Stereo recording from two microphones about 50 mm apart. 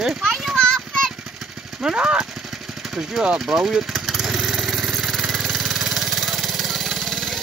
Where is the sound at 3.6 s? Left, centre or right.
Centre.